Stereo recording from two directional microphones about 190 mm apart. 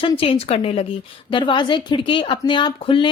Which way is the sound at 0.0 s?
30° left (ahead or behind).